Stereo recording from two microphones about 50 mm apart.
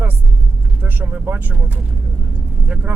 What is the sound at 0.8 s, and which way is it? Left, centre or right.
Vehicle, right.